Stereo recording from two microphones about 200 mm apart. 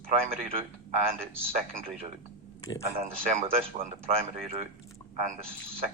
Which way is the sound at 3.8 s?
45° right (ahead or behind).